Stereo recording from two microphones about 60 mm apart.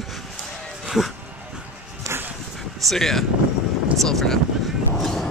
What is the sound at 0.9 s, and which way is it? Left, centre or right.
Speech, centre.